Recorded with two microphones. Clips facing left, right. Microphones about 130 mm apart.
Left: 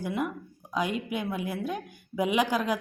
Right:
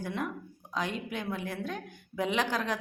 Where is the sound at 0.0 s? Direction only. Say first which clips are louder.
Left 4 dB; 10° left (ahead or behind).